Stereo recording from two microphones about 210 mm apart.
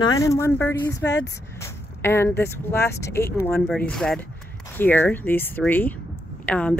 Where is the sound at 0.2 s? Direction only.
15° left (ahead or behind).